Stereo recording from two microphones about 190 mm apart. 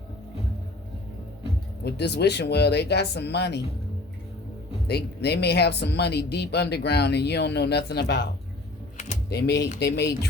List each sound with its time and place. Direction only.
1.8 s speech: 60° left (ahead or behind)
4.9 s speech: 60° left (ahead or behind)
9.3 s speech: 55° left (ahead or behind)